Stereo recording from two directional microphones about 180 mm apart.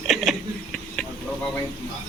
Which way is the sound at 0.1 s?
Centre (ahead or behind).